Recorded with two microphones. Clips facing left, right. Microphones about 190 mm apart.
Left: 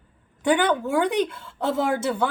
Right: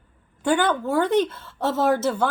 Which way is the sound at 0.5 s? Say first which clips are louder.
Even; 15° left (ahead or behind).